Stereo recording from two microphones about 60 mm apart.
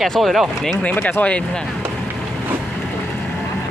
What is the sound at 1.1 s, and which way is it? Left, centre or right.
Speech, left.